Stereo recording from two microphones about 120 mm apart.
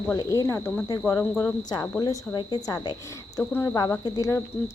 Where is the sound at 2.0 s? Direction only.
35° left (ahead or behind).